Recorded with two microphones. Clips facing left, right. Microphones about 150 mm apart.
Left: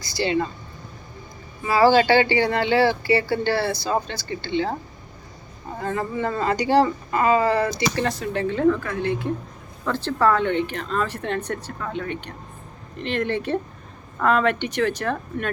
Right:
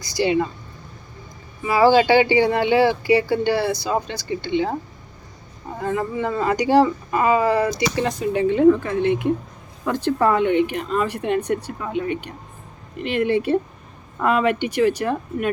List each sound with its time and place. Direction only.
0.0 s speech: 20° right (ahead or behind)
1.9 s speech: 15° right (ahead or behind)
5.8 s speech: 5° right (ahead or behind)
7.1 s speech: 15° right (ahead or behind)